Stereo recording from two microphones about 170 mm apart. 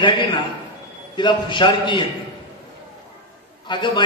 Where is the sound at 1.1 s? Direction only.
30° left (ahead or behind).